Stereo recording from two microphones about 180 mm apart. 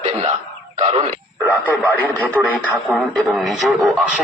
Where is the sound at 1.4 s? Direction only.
5° left (ahead or behind).